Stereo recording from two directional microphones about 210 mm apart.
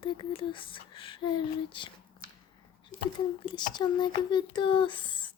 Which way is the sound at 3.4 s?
20° left (ahead or behind).